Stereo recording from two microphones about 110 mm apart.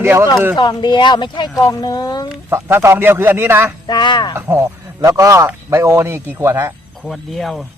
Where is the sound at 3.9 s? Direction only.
45° left (ahead or behind).